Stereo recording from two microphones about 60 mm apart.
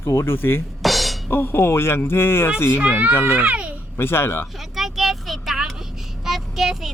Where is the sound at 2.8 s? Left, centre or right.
Right.